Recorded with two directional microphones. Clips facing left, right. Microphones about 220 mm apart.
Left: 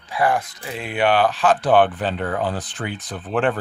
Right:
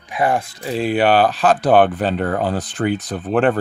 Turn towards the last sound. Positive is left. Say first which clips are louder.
# right 5 dB
turn(degrees=-40)  # may be behind; listen again after turning